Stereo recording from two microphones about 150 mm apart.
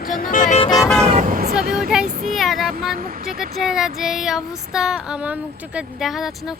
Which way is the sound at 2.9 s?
85° right.